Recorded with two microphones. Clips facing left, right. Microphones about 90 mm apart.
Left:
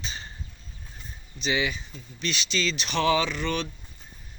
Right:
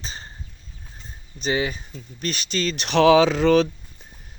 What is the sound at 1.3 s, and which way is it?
Speech, 40° right (ahead or behind).